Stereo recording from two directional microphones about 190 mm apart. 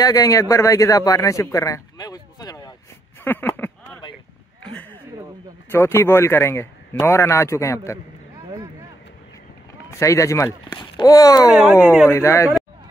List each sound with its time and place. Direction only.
0.0 s speech: 20° left (ahead or behind)
3.3 s a sound: 10° left (ahead or behind)
5.7 s speech: 15° left (ahead or behind)
9.8 s speech: 15° left (ahead or behind)
11.5 s speech: 5° right (ahead or behind)
12.1 s speech: 15° left (ahead or behind)